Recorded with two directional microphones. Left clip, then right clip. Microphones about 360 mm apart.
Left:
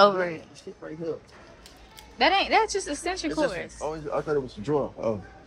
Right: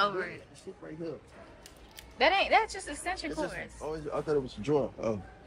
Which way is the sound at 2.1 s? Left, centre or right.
Centre.